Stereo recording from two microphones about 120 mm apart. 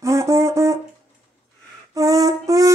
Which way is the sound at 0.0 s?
25° right (ahead or behind).